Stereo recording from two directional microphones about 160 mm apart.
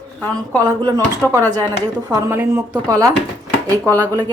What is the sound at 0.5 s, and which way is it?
Speech, 20° right (ahead or behind).